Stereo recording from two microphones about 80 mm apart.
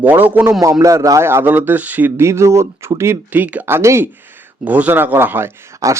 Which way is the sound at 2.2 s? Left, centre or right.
Right.